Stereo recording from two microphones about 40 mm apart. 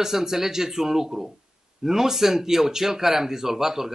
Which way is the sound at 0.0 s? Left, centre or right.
Centre.